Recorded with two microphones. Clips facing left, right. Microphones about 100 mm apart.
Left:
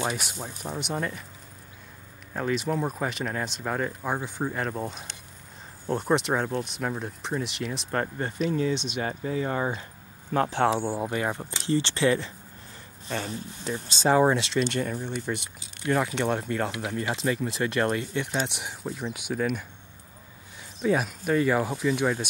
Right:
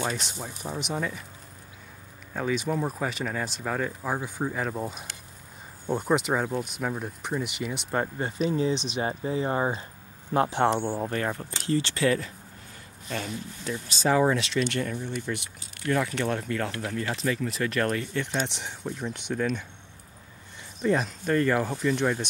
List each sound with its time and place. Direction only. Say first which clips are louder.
0.0 s speech: left 1 dB; 10° left (ahead or behind)
2.3 s speech: even; centre (ahead or behind); by 9.8 s 25° right (ahead or behind)
10.3 s speech: even; 5° right (ahead or behind); by 11.4 s 15° left (ahead or behind)
11.6 s speech: left 1 dB; 30° left (ahead or behind)
18.2 s speech: even; 10° left (ahead or behind)
20.8 s speech: even; 5° left (ahead or behind)